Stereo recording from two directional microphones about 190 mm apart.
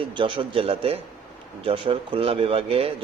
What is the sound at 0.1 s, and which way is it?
Speech, 25° right (ahead or behind).